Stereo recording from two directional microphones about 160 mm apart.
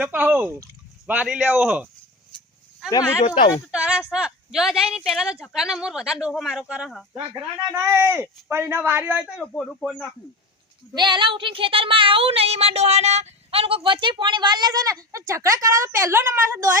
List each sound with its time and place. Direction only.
0.0 s speech: 10° right (ahead or behind)
3.7 s speech: 5° right (ahead or behind)
7.2 s speech: 30° right (ahead or behind)
7.8 s speech: 15° right (ahead or behind)
9.5 s speech: 10° left (ahead or behind)
10.9 s speech: 30° right (ahead or behind)